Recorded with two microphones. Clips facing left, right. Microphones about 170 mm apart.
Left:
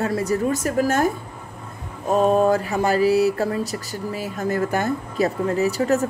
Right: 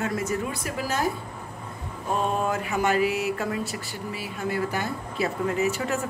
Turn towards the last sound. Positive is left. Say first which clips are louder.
# left 6 dB
turn(degrees=40)  # may be behind; listen again after turning